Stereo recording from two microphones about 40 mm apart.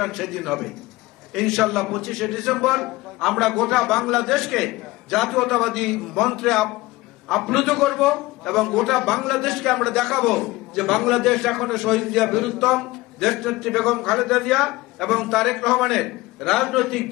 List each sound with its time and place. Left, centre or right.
0.0 s a man's voice: centre